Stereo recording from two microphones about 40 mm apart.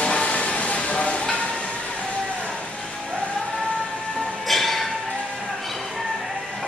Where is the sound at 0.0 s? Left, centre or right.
Left.